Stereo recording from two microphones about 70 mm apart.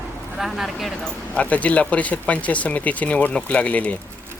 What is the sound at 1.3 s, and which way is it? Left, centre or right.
Speech, centre.